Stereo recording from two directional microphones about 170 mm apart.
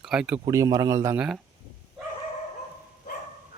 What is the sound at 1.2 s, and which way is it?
Speech, 5° right (ahead or behind).